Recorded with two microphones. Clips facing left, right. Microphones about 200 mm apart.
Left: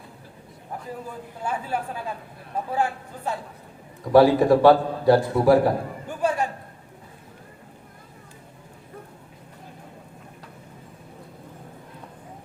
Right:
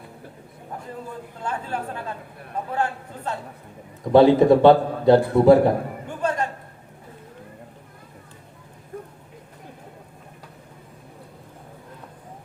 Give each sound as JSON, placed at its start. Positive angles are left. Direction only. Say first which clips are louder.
{"t": 1.4, "sound": "speech", "louder": "left 1 dB", "side_deg": 10}
{"t": 4.0, "sound": "a man's voice", "louder": "right 2 dB", "side_deg": -20}
{"t": 6.1, "sound": "a sound", "louder": "left 1 dB", "side_deg": 10}